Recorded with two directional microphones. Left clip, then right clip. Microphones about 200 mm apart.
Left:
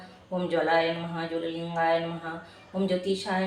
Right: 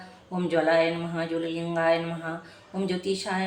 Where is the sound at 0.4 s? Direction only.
40° right (ahead or behind).